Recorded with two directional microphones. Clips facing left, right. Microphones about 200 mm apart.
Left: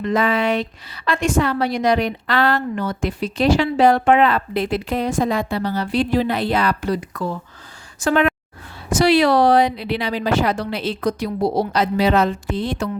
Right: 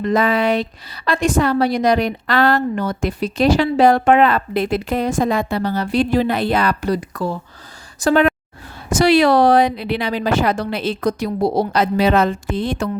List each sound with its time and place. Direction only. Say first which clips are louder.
0.0 s a woman's voice: right 2 dB; 40° right (ahead or behind)